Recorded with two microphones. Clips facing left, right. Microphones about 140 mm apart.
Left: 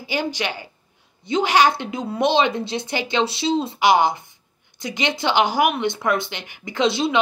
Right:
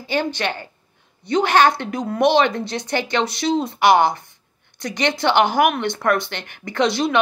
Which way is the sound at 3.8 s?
55° right (ahead or behind).